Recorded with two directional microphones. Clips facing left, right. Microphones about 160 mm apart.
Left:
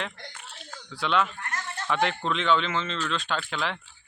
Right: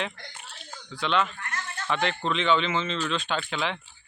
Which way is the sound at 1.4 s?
40° left (ahead or behind).